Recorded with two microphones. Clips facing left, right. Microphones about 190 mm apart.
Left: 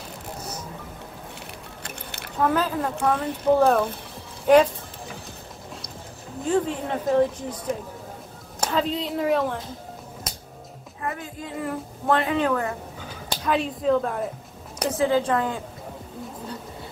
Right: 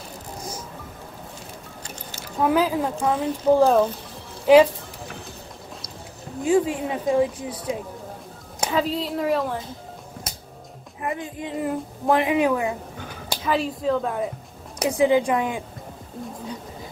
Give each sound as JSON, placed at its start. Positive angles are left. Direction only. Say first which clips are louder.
{"t": 1.8, "sound": "music", "louder": "left 1 dB", "side_deg": 60}
{"t": 2.4, "sound": "a woman's voice", "louder": "right 3 dB", "side_deg": -10}
{"t": 6.4, "sound": "a woman's voice", "louder": "right 3 dB", "side_deg": -10}
{"t": 11.0, "sound": "a woman's voice", "louder": "right 3 dB", "side_deg": -20}
{"t": 13.3, "sound": "speech", "louder": "right 1 dB", "side_deg": 0}
{"t": 14.8, "sound": "a woman's voice", "louder": "right 3 dB", "side_deg": -15}